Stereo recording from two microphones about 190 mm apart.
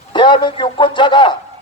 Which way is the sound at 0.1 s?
25° left (ahead or behind).